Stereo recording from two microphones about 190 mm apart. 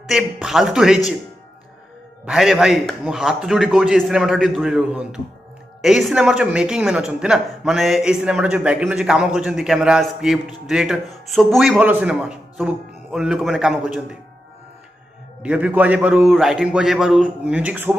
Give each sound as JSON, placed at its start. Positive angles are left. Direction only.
{"t": 0.0, "sound": "speech", "side_deg": -5}
{"t": 2.2, "sound": "speech", "side_deg": 0}
{"t": 15.4, "sound": "speech", "side_deg": -5}